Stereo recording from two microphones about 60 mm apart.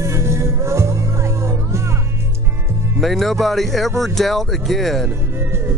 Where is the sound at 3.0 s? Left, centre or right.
Centre.